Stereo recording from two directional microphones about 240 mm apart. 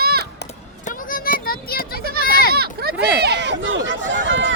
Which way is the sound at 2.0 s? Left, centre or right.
Right.